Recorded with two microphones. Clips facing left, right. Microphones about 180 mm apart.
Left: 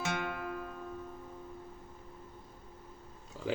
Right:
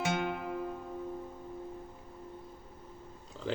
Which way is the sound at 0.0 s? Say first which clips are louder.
Right 3 dB; 20° right (ahead or behind).